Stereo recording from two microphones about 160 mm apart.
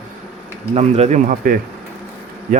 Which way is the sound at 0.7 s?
40° right (ahead or behind).